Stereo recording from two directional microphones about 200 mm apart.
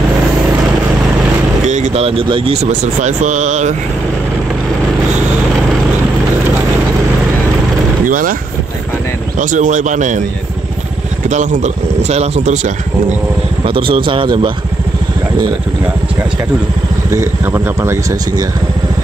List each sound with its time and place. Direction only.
1.7 s speech: 35° right (ahead or behind)
8.0 s vehicle: 45° right (ahead or behind)
9.4 s speech: 40° right (ahead or behind)
11.2 s speech: 35° right (ahead or behind)
17.1 s speech: 15° right (ahead or behind)